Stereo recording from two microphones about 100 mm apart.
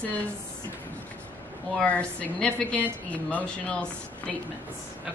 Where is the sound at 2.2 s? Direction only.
10° left (ahead or behind).